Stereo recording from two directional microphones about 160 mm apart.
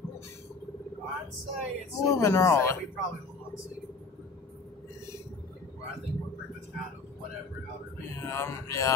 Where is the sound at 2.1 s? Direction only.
20° left (ahead or behind).